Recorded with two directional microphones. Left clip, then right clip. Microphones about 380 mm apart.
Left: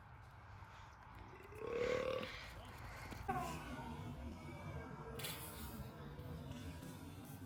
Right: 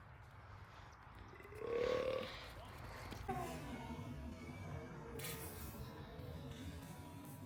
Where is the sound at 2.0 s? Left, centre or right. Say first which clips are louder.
Right 1 dB; right.